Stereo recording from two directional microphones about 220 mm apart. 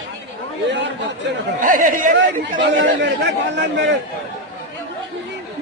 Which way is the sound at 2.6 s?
50° right (ahead or behind).